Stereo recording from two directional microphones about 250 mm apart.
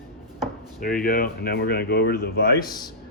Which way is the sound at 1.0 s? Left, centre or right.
Left.